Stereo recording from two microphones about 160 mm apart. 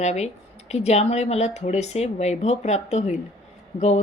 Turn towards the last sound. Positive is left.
turn(degrees=45)  # may be behind; listen again after turning